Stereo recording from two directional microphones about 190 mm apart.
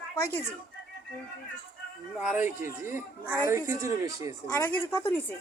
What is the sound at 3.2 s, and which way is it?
Speech, 10° right (ahead or behind).